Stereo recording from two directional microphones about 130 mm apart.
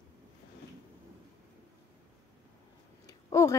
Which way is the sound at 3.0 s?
25° left (ahead or behind).